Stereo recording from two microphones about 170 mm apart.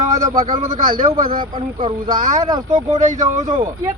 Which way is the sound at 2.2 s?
50° right (ahead or behind).